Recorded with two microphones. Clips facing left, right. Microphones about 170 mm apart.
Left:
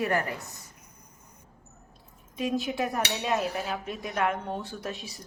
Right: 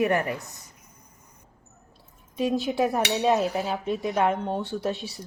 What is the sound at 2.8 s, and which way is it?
Speech, 35° right (ahead or behind).